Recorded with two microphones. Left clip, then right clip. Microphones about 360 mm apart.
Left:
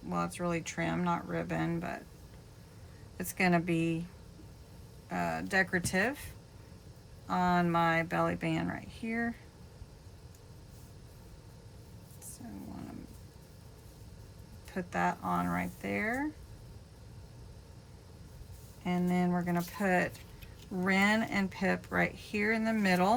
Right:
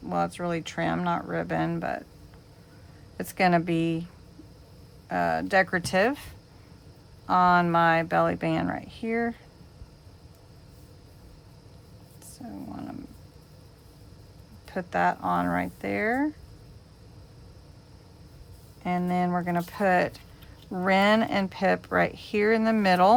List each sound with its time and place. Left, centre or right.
0.1 s speech: centre
3.2 s speech: centre
5.0 s speech: centre
14.7 s speech: centre
18.8 s speech: centre